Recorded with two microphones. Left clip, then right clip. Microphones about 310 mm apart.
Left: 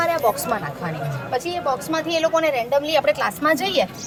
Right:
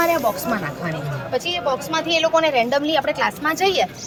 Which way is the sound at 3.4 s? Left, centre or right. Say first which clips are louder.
Even; centre.